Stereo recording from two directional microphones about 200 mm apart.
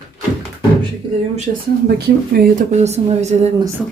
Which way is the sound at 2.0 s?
50° right (ahead or behind).